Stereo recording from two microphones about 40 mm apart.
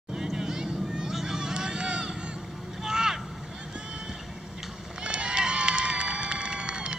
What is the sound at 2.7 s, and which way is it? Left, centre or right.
Vehicle, centre.